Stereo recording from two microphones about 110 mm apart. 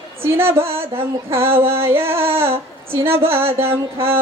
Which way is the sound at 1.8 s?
20° right (ahead or behind).